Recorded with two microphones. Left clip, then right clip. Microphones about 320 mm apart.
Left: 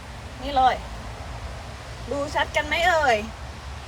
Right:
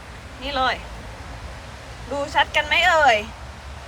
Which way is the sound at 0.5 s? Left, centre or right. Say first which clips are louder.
Left 3 dB; centre.